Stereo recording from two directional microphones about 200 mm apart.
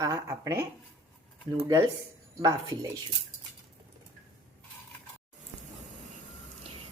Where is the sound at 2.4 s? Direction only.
20° right (ahead or behind).